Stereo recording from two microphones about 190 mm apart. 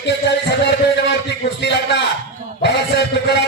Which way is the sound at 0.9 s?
65° left (ahead or behind).